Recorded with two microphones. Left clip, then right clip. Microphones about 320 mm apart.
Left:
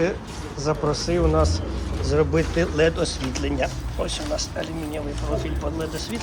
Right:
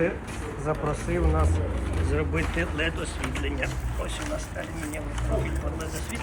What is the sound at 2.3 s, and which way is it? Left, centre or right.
Speech, left.